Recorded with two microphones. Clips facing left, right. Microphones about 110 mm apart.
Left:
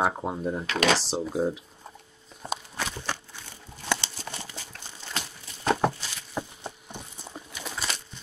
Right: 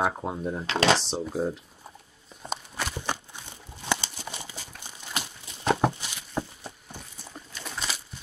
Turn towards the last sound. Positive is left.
turn(degrees=0)  # may be behind; listen again after turning